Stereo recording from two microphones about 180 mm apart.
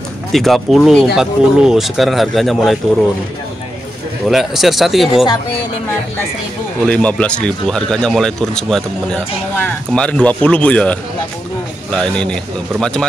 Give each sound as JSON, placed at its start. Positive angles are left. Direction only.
{"t": 0.3, "sound": "speech", "side_deg": 0}
{"t": 4.3, "sound": "speech", "side_deg": 0}
{"t": 5.1, "sound": "speech", "side_deg": 25}
{"t": 6.9, "sound": "speech", "side_deg": 5}